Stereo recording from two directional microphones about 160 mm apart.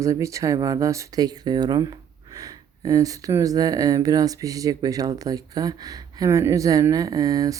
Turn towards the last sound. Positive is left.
turn(degrees=-20)  # may be behind; listen again after turning